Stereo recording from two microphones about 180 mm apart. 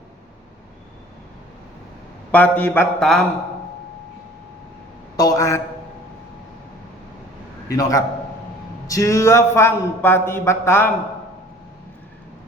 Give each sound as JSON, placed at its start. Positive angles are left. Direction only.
{"t": 2.3, "sound": "speech", "side_deg": 10}
{"t": 5.1, "sound": "a man's voice", "side_deg": 20}
{"t": 7.7, "sound": "a man's voice", "side_deg": 20}